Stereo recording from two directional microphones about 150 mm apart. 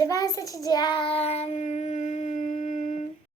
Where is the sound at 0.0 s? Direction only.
25° left (ahead or behind); by 3.1 s 55° left (ahead or behind).